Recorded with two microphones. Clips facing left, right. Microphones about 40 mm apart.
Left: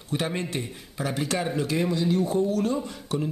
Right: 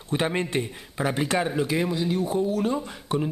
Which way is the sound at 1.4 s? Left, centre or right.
Centre.